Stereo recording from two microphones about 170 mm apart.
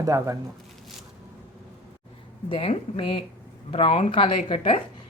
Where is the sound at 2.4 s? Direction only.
35° left (ahead or behind).